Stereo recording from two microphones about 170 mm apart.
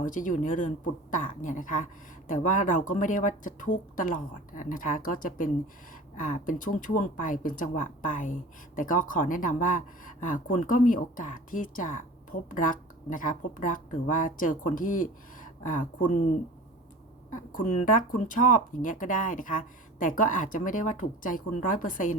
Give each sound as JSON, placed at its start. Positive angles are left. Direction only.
{"t": 0.0, "sound": "speech", "side_deg": 50}
{"t": 17.3, "sound": "speech", "side_deg": 50}